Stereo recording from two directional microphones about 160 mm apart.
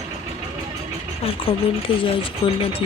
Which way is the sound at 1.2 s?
35° left (ahead or behind).